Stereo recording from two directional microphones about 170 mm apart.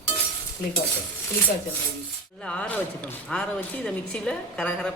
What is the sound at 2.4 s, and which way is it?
A woman's voice, 5° left (ahead or behind).